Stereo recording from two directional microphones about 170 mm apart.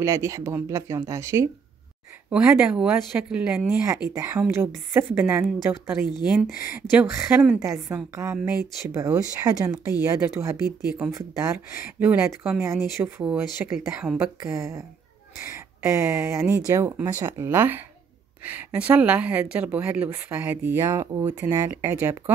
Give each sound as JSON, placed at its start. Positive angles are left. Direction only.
{"t": 0.0, "sound": "a woman's voice", "side_deg": -20}
{"t": 4.1, "sound": "a woman's voice", "side_deg": -15}